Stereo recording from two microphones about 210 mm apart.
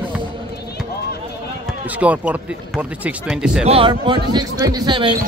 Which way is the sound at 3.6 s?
25° right (ahead or behind).